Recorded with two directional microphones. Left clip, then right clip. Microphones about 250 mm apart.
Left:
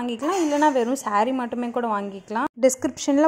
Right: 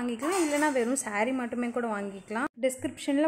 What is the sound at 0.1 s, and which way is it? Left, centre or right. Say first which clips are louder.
A woman's voice: left 5 dB; centre.